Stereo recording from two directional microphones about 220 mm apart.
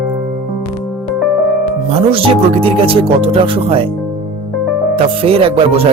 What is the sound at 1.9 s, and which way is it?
Speech, 25° right (ahead or behind).